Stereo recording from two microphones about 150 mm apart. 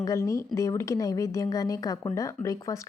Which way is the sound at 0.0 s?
20° left (ahead or behind).